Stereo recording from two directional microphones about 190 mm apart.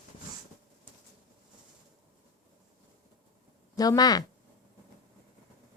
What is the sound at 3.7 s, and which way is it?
Speech, 20° left (ahead or behind).